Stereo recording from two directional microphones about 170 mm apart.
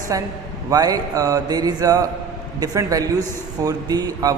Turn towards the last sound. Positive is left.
turn(degrees=-20)  # may be behind; listen again after turning